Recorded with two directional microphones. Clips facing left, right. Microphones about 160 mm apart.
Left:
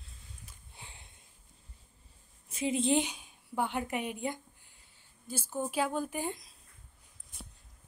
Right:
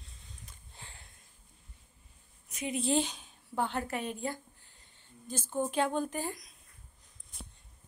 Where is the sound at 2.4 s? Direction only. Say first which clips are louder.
Left 3 dB; 25° left (ahead or behind); by 6.3 s 10° left (ahead or behind).